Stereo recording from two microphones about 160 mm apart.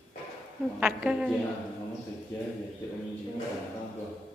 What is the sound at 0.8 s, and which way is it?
Speech, 5° right (ahead or behind).